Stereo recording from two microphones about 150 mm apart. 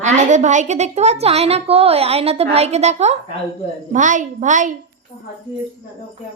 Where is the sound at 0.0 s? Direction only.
55° right (ahead or behind).